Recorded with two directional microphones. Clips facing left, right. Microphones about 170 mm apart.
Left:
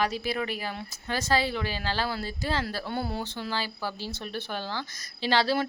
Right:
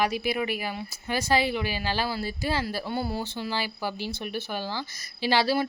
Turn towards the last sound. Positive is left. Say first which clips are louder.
# right 1 dB
turn(degrees=-10)  # may be behind; listen again after turning